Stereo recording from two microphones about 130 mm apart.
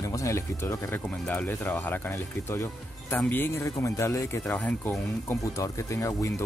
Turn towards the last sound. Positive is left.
turn(degrees=20)  # may be behind; listen again after turning